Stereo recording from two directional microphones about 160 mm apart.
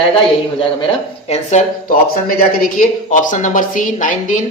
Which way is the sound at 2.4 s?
55° left (ahead or behind).